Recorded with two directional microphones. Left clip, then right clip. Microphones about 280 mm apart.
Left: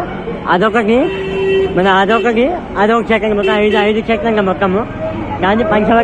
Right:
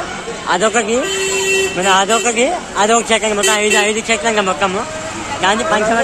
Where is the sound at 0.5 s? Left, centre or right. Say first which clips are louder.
Left 3 dB; centre.